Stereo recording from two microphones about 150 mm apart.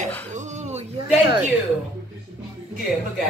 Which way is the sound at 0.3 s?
55° right (ahead or behind).